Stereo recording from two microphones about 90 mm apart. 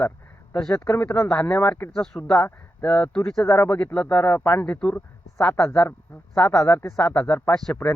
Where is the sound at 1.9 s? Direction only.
5° left (ahead or behind).